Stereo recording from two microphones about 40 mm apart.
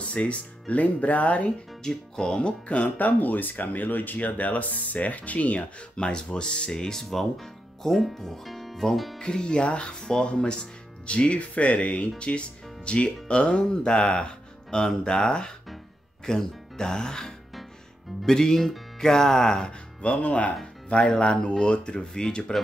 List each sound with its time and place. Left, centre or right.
0.1 s speech: left
1.8 s speech: centre; by 5.7 s left
5.9 s speech: left; by 9.2 s centre
9.2 s speech: left
20.0 s speech: left